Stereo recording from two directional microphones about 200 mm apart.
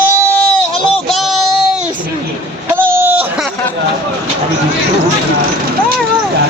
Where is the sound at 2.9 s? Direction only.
10° right (ahead or behind).